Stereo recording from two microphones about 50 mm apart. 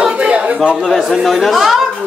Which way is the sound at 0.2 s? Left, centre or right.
Right.